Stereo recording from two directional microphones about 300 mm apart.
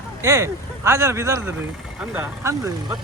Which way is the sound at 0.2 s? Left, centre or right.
Centre.